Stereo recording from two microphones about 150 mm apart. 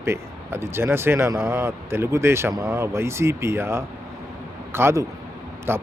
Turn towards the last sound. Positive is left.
turn(degrees=-15)  # may be behind; listen again after turning